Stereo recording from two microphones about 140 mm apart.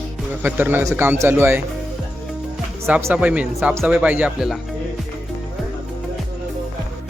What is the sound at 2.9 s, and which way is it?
Speech, 15° right (ahead or behind).